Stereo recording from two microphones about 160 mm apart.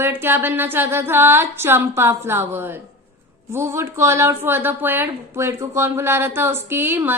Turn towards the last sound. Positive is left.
turn(degrees=-15)  # may be behind; listen again after turning